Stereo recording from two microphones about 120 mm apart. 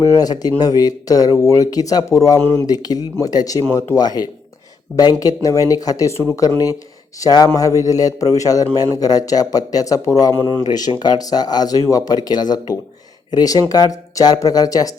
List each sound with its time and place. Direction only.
0.0 s a man's voice: 30° left (ahead or behind)